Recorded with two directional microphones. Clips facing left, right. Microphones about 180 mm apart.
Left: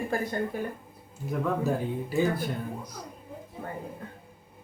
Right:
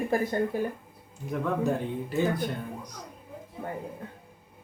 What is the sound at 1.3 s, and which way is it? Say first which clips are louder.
Speech: even; 5° left (ahead or behind).